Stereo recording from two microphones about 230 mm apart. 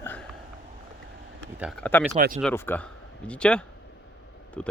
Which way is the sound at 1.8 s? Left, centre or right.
Centre.